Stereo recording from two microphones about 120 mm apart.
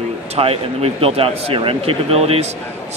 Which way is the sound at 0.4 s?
55° right (ahead or behind).